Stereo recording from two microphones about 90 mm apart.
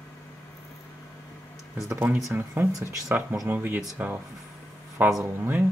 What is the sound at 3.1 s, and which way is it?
Speech, 15° right (ahead or behind).